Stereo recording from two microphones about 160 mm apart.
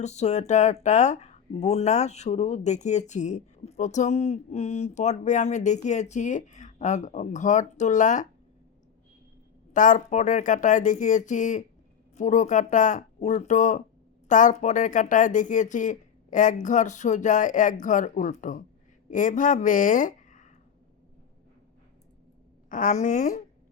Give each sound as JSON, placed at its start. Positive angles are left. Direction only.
{"t": 0.0, "sound": "speech", "side_deg": 45}
{"t": 9.7, "sound": "speech", "side_deg": 55}
{"t": 22.7, "sound": "speech", "side_deg": 50}